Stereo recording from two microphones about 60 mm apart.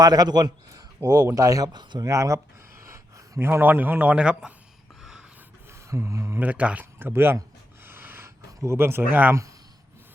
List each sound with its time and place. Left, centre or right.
0.0 s a man's voice: right
0.7 s a sound: right
1.4 s speech: right
3.6 s a man's voice: right
5.9 s speech: right
6.4 s a man's voice: right
7.0 s speech: right
7.9 s snort: right
8.6 s speech: right